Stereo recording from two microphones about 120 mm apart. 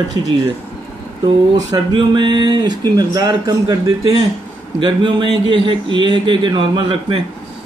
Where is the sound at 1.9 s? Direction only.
40° right (ahead or behind).